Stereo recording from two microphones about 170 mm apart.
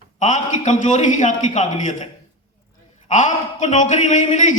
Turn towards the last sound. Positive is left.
turn(degrees=45)  # may be behind; listen again after turning